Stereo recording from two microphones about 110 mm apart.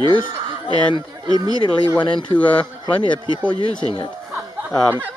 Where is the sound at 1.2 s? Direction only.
35° right (ahead or behind).